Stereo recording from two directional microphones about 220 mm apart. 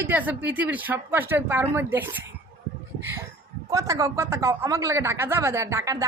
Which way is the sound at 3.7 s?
15° right (ahead or behind).